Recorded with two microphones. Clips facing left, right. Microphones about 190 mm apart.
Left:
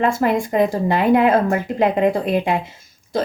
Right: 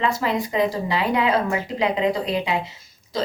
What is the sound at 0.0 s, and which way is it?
A woman's voice, 50° left (ahead or behind).